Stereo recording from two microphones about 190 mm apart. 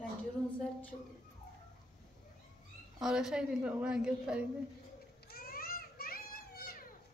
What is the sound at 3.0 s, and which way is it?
A woman's voice, 5° right (ahead or behind).